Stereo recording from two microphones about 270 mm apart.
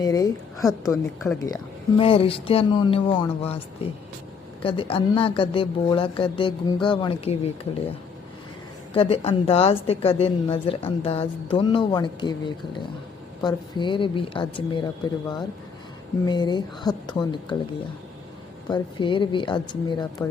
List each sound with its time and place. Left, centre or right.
0.0 s speech: centre
4.6 s speech: centre
8.9 s speech: left
16.2 s speech: centre
18.7 s speech: centre